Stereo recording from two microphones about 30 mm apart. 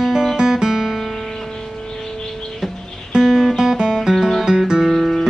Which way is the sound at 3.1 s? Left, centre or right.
Centre.